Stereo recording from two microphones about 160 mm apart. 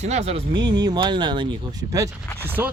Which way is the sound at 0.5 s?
25° right (ahead or behind).